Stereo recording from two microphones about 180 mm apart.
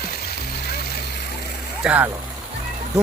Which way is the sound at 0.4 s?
60° left (ahead or behind).